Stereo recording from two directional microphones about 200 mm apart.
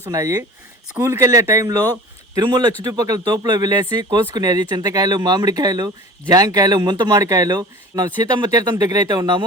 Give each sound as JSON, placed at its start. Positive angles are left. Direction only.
{"t": 0.0, "sound": "speech", "side_deg": -15}